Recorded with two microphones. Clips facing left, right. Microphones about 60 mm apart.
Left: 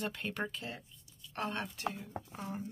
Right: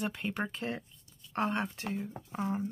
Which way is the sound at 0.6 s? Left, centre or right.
Right.